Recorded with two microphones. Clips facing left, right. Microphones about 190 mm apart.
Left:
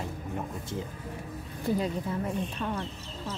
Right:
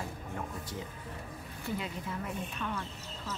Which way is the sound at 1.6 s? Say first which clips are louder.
Left 9 dB; 35° left (ahead or behind).